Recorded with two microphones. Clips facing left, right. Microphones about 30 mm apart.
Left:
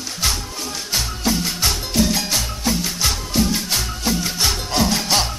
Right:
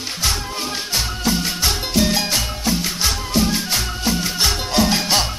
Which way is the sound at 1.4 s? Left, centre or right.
Centre.